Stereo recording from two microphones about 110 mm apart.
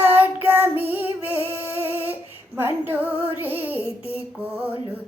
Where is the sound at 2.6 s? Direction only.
20° right (ahead or behind).